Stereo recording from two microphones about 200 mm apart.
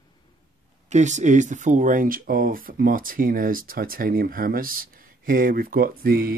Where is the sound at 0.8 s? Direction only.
35° right (ahead or behind).